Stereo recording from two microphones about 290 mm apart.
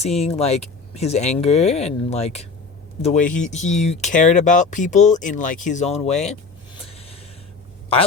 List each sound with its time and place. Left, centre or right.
0.0 s speech: left
6.8 s snort: centre